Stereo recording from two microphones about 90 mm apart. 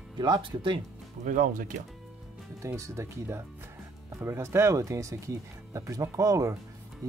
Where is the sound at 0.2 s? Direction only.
65° right (ahead or behind).